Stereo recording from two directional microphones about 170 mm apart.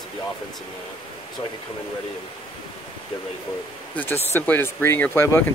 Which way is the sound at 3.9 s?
10° left (ahead or behind).